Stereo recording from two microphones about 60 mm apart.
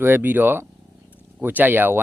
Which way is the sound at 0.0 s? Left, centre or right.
Right.